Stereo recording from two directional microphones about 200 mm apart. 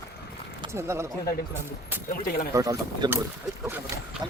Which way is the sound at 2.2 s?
45° left (ahead or behind).